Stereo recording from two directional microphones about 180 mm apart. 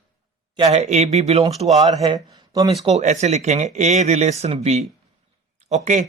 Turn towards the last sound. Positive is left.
turn(degrees=-40)  # may be behind; listen again after turning